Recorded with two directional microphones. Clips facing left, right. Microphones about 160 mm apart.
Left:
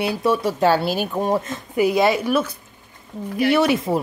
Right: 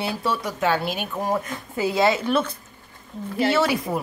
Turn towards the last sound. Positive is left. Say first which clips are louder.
# left 4 dB
turn(degrees=20)  # may be behind; listen again after turning